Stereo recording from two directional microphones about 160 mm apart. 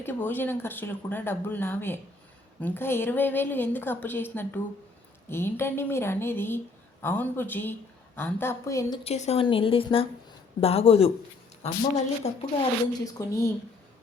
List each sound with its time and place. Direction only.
0.0 s a woman's voice: 15° left (ahead or behind)
9.0 s a woman's voice: 40° left (ahead or behind)
13.1 s speech: 20° left (ahead or behind)